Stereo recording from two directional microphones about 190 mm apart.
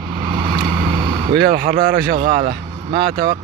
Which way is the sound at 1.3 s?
55° right (ahead or behind).